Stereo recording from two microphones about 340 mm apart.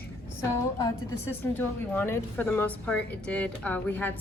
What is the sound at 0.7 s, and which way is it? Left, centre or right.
A woman's voice, centre.